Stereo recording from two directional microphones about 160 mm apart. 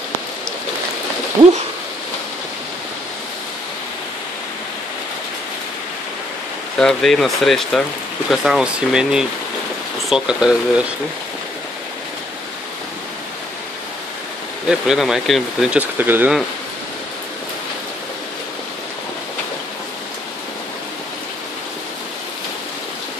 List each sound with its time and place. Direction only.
1.4 s a sound: 30° right (ahead or behind)
6.8 s speech: 5° left (ahead or behind)
14.7 s speech: 5° right (ahead or behind)
16.0 s speech: 10° right (ahead or behind)